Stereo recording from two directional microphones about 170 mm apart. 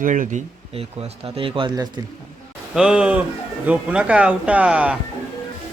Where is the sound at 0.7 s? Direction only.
35° right (ahead or behind).